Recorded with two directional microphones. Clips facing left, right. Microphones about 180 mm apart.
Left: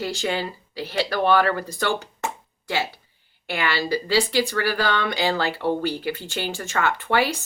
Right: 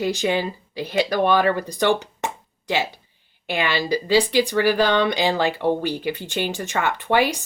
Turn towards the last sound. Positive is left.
turn(degrees=-15)  # may be behind; listen again after turning